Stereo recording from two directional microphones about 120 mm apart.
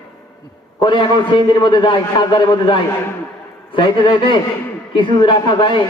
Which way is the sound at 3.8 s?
40° left (ahead or behind).